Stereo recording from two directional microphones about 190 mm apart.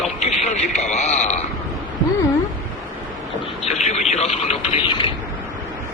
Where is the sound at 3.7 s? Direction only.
35° left (ahead or behind).